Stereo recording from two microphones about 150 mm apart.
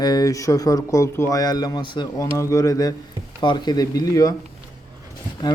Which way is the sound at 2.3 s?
20° left (ahead or behind).